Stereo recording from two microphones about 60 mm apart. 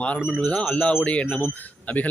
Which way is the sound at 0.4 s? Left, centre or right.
Centre.